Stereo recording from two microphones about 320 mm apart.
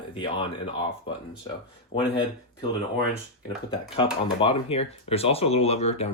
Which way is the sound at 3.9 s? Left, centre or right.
Centre.